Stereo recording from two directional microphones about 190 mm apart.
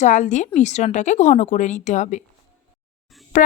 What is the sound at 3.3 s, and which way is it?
Speech, 45° left (ahead or behind).